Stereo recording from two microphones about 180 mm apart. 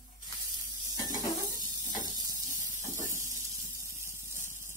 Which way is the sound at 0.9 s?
20° right (ahead or behind).